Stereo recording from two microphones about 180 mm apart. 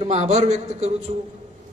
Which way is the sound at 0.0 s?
40° right (ahead or behind).